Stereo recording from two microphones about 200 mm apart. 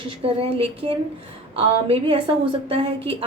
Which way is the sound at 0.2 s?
30° right (ahead or behind).